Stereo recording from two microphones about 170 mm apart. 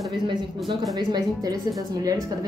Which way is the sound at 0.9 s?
25° right (ahead or behind).